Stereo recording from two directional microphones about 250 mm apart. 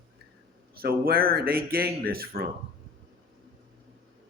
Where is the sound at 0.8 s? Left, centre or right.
Right.